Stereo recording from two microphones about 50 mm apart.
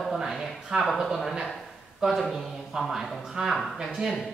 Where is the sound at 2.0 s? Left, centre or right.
Centre.